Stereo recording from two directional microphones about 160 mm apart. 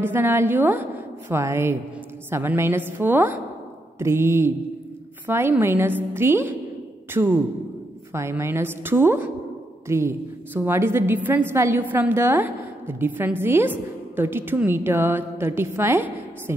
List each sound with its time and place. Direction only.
0.0 s a woman's voice: 15° right (ahead or behind)